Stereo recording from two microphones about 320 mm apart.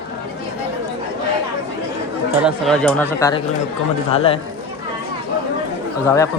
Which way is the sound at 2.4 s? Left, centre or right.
Centre.